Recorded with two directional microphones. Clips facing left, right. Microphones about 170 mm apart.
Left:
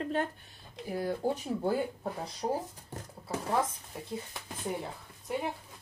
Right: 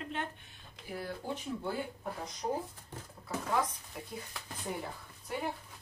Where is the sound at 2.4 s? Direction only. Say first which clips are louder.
Left 3 dB; 30° left (ahead or behind).